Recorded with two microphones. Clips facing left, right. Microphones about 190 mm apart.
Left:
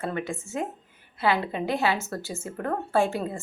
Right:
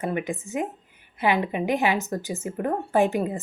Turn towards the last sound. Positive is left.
turn(degrees=-15)  # may be behind; listen again after turning